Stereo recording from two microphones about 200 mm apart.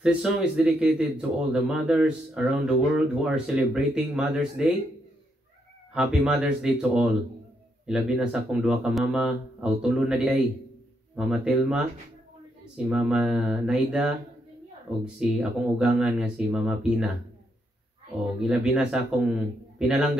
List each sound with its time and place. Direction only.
0.0 s speech: 5° right (ahead or behind)
5.9 s speech: 5° right (ahead or behind)
15.1 s speech: 5° right (ahead or behind)
18.4 s speech: 5° right (ahead or behind)